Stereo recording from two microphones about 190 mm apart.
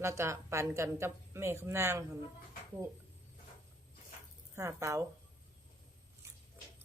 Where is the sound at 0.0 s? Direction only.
15° right (ahead or behind).